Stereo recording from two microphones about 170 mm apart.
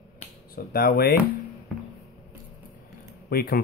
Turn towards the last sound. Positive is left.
turn(degrees=60)  # may be behind; listen again after turning